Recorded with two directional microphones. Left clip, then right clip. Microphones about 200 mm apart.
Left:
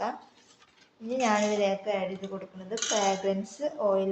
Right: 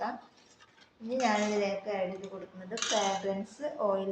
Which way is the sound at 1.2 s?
40° left (ahead or behind).